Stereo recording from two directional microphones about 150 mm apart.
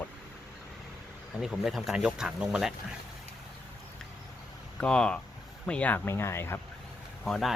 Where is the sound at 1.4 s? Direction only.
Centre (ahead or behind).